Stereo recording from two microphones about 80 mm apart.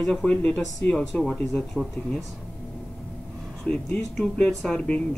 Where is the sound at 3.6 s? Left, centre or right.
Centre.